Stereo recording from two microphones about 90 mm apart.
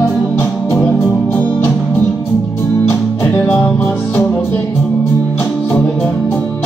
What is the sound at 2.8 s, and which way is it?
Music, 30° left (ahead or behind).